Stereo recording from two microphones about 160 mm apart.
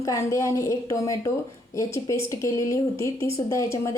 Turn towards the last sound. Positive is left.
turn(degrees=20)  # may be behind; listen again after turning